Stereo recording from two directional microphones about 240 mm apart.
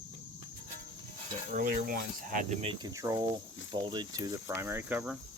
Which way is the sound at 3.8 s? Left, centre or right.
Centre.